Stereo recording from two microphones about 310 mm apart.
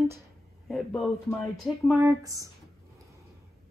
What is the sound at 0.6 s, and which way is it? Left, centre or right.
Speech, centre.